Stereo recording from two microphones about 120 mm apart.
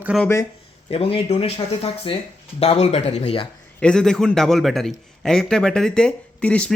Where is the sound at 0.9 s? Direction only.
55° left (ahead or behind).